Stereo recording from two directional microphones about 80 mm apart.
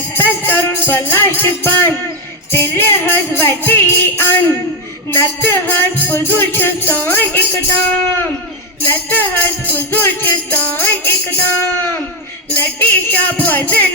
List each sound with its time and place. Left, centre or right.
0.1 s music: left
12.5 s music: left